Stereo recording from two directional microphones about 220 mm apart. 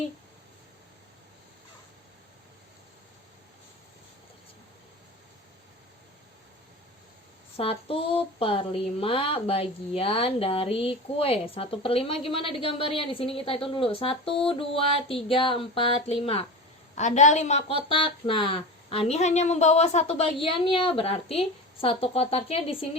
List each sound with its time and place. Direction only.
7.5 s a woman's voice: 25° left (ahead or behind)